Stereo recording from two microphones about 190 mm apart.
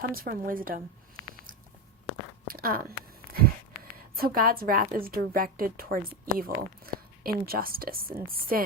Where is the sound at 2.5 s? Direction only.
50° right (ahead or behind).